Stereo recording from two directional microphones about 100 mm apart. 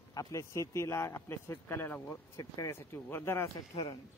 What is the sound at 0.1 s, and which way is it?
A man's voice, 35° left (ahead or behind).